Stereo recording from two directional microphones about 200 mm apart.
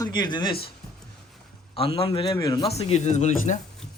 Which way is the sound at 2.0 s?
30° left (ahead or behind).